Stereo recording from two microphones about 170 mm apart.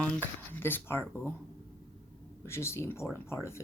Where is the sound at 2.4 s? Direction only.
15° left (ahead or behind).